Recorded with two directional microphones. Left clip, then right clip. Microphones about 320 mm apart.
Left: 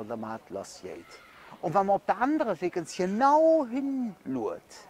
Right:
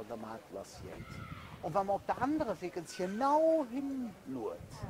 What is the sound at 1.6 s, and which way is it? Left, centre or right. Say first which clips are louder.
Speech: left 8 dB; left.